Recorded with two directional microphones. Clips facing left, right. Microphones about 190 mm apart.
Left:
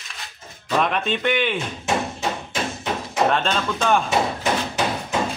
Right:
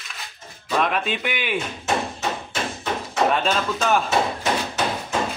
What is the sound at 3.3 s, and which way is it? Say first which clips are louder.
Speech: even; 5° right (ahead or behind).